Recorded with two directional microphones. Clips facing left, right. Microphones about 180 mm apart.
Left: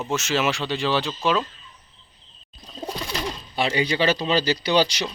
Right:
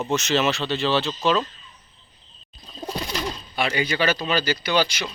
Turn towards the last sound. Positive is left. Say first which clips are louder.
# left 2 dB
turn(degrees=35)  # may be behind; listen again after turning